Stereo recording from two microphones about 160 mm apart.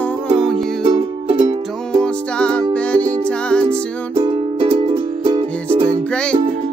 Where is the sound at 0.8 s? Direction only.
30° right (ahead or behind).